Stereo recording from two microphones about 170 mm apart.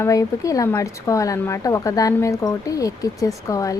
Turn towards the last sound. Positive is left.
turn(degrees=20)  # may be behind; listen again after turning